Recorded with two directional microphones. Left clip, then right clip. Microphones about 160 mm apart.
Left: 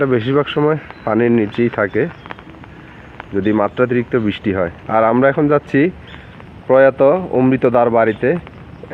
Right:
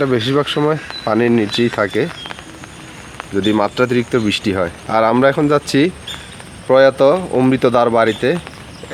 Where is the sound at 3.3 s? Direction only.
20° right (ahead or behind).